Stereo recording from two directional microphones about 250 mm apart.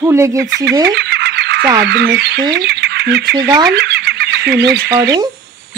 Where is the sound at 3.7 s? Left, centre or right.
Right.